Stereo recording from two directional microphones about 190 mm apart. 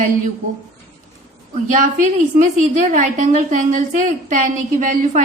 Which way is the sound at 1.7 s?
45° right (ahead or behind).